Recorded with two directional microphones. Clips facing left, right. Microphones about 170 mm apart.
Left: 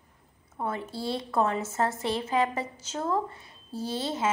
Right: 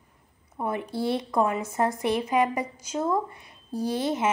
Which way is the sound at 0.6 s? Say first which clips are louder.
Right 4 dB; 15° right (ahead or behind).